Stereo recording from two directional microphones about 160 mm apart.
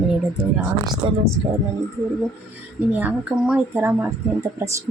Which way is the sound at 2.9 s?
10° right (ahead or behind).